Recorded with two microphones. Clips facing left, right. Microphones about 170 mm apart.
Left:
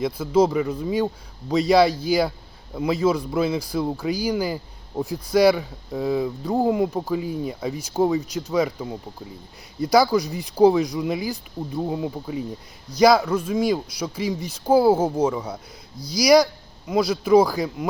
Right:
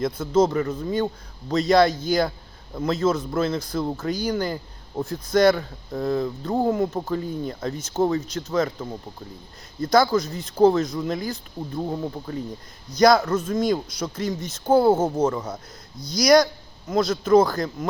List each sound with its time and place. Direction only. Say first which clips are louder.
0.0 s speech: left 1 dB; 10° left (ahead or behind)